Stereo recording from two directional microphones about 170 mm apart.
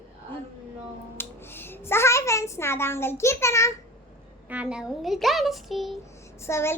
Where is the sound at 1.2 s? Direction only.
15° left (ahead or behind).